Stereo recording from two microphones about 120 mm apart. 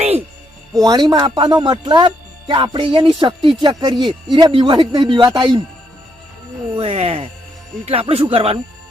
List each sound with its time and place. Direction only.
0.7 s speech: 30° right (ahead or behind)
6.7 s speech: 50° right (ahead or behind)